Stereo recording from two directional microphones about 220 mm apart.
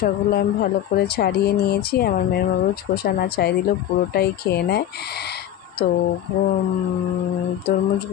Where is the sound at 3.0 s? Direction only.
45° left (ahead or behind).